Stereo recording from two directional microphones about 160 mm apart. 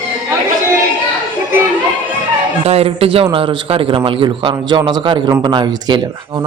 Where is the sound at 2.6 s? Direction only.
40° right (ahead or behind).